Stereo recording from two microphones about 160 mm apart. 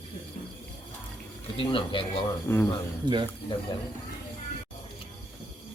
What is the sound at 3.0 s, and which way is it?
Speech, 30° right (ahead or behind).